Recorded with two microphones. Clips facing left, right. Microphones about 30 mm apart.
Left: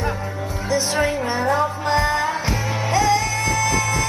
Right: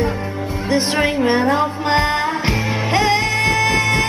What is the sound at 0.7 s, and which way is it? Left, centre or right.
Music, right.